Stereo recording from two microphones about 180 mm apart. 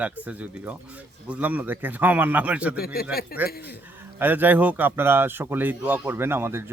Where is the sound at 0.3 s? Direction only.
5° right (ahead or behind).